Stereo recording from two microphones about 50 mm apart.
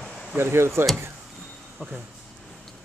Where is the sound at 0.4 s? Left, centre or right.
Right.